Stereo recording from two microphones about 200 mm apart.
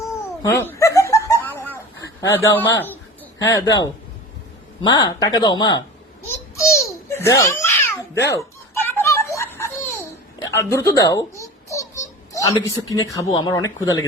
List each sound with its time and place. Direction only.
0.6 s laughter: 15° left (ahead or behind)
2.3 s speech: 10° left (ahead or behind)
6.2 s babbling: 15° left (ahead or behind)
8.8 s a sound: 10° left (ahead or behind)
10.4 s a child's voice: 15° left (ahead or behind)